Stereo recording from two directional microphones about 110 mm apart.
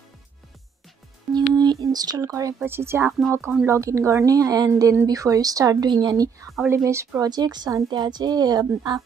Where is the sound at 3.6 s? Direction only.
25° right (ahead or behind).